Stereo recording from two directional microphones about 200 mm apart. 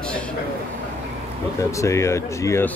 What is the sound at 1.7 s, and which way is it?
Speech, 15° left (ahead or behind).